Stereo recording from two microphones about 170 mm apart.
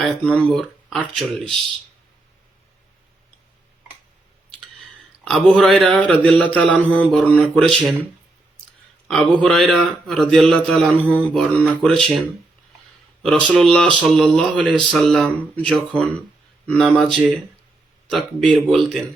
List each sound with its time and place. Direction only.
0.0 s speech: 5° left (ahead or behind)
5.3 s a man's voice: 5° left (ahead or behind)
9.0 s speech: centre (ahead or behind)
13.2 s speech: 5° left (ahead or behind)